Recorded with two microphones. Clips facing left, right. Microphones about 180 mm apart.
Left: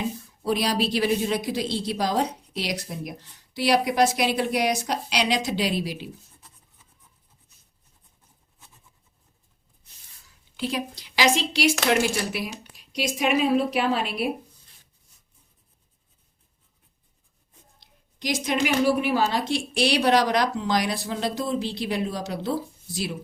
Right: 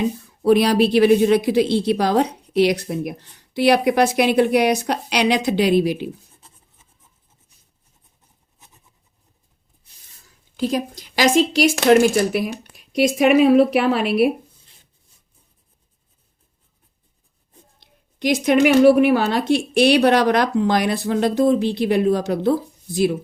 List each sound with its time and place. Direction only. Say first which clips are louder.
0.4 s a woman's voice: right 9 dB; 60° right (ahead or behind)
8.5 s vehicle: right 2 dB; 20° right (ahead or behind)
10.6 s a woman's voice: right 7 dB; 40° right (ahead or behind); by 14.3 s 60° right (ahead or behind)
17.7 s a woman's voice: right 9 dB; 60° right (ahead or behind)